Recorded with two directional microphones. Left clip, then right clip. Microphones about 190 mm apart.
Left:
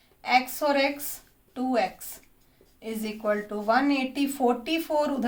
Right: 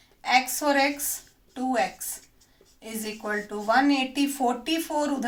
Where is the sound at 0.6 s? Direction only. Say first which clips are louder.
Right 1 dB; 40° left (ahead or behind).